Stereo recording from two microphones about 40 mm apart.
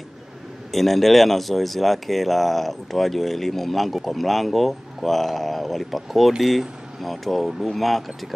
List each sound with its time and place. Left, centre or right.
0.7 s speech: centre